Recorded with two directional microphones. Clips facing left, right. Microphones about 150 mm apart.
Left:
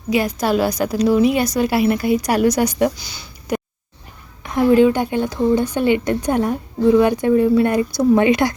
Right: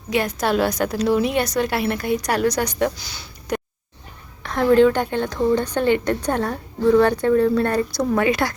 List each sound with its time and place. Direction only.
0.1 s a woman's voice: centre (ahead or behind)
3.0 s a sound: centre (ahead or behind)
4.4 s speech: 10° left (ahead or behind)